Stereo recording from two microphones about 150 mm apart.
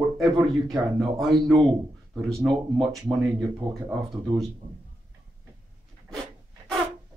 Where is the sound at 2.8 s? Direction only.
20° right (ahead or behind).